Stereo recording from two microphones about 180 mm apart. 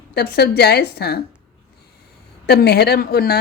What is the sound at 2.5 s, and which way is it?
Speech, 65° left (ahead or behind).